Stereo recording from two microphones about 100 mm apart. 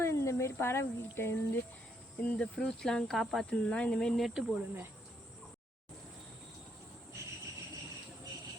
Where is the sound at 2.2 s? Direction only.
10° left (ahead or behind).